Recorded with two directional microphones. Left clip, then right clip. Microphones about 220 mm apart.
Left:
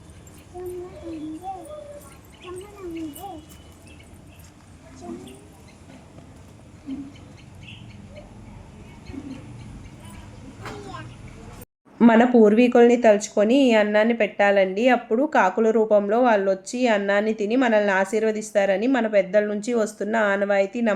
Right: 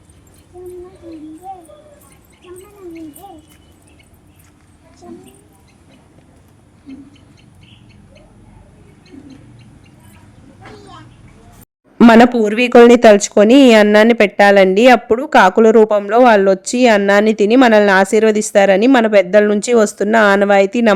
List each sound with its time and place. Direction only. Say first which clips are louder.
10.6 s vehicle: left 1 dB; 50° left (ahead or behind)
11.9 s speech: right 8 dB; 50° right (ahead or behind)